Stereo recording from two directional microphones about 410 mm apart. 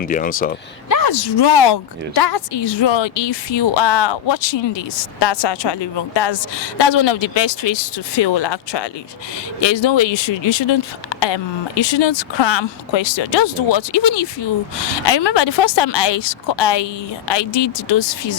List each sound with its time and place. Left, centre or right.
0.0 s speech: centre
0.9 s a woman's voice: left
9.6 s a woman's voice: left